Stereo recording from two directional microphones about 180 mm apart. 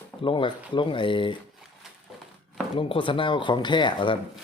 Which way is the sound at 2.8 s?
30° left (ahead or behind).